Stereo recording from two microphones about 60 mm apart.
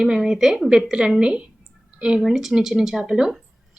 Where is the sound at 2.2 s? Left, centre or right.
Centre.